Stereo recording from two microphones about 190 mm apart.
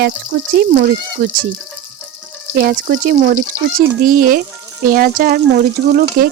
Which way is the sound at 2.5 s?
50° right (ahead or behind).